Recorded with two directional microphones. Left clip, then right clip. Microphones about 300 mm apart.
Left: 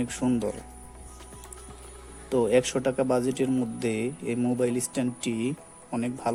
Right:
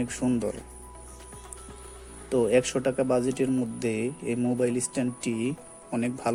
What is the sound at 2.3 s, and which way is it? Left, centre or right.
Speech, centre.